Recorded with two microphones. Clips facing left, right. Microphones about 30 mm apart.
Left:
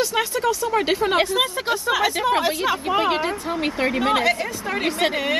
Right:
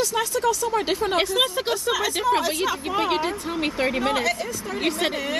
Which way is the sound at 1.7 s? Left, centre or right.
Left.